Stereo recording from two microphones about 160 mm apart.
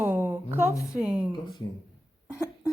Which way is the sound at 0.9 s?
5° right (ahead or behind).